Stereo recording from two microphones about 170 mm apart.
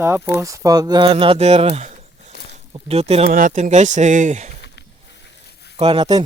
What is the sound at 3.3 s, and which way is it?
Speech, 50° right (ahead or behind).